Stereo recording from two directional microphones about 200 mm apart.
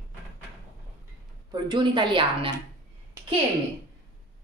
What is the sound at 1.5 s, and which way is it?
Speech, 25° right (ahead or behind).